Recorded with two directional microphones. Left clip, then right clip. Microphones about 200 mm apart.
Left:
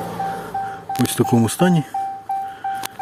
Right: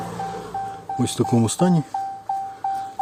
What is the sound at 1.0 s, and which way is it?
Speech, centre (ahead or behind).